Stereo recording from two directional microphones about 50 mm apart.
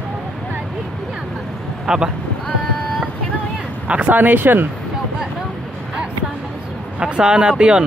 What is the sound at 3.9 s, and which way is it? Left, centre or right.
Speech, right.